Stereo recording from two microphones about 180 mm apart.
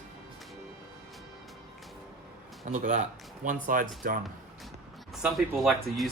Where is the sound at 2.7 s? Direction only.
40° right (ahead or behind).